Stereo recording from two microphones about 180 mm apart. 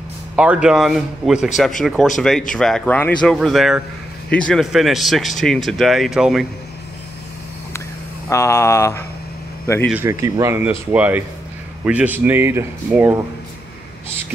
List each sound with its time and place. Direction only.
0.4 s speech: 5° right (ahead or behind)
8.3 s a sound: 15° left (ahead or behind)
9.8 s speech: 10° right (ahead or behind)